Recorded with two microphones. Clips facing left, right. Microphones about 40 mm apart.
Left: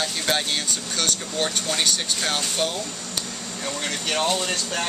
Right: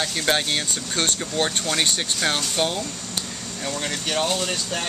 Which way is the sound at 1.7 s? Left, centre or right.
Centre.